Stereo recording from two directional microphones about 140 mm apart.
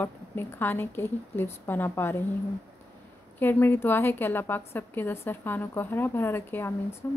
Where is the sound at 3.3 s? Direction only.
15° left (ahead or behind).